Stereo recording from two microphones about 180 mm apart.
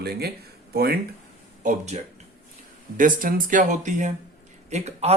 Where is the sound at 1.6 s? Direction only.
45° right (ahead or behind).